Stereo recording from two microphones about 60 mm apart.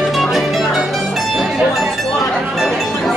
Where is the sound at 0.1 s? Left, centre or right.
Centre.